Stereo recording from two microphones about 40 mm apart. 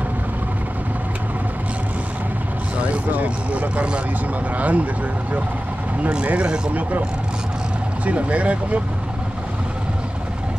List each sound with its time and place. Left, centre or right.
3.1 s speech: right
6.0 s speech: right
8.0 s speech: right